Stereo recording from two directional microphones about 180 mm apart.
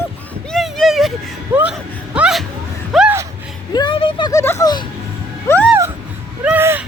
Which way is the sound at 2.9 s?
5° right (ahead or behind).